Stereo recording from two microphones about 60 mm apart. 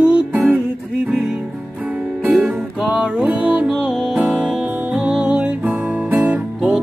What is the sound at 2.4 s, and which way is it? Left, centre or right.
Music, centre.